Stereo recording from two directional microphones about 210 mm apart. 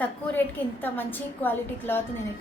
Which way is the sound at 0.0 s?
10° left (ahead or behind).